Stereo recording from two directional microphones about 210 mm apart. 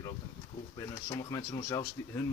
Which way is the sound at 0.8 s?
15° left (ahead or behind).